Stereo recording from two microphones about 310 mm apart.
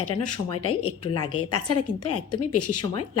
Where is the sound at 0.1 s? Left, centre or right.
Left.